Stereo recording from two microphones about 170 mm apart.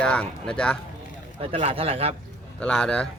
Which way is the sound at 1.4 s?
35° right (ahead or behind).